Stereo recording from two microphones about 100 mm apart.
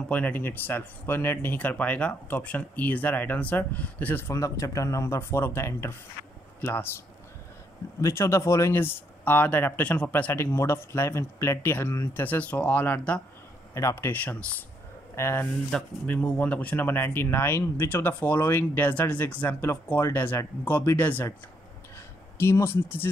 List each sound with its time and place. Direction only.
0.1 s speech: 15° left (ahead or behind)
8.0 s speech: 25° left (ahead or behind)
13.7 s speech: 25° left (ahead or behind)
15.7 s speech: 10° left (ahead or behind)
21.9 s a sound: 25° left (ahead or behind)